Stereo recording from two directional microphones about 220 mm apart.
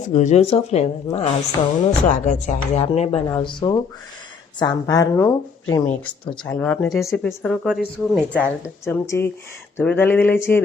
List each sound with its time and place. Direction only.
0.1 s speech: 30° left (ahead or behind)
3.2 s a woman's voice: 15° left (ahead or behind); by 8.4 s centre (ahead or behind)
8.8 s a woman's voice: 10° left (ahead or behind)